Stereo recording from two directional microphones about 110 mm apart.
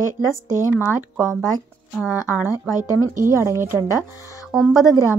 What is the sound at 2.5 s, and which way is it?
Speech, 30° left (ahead or behind).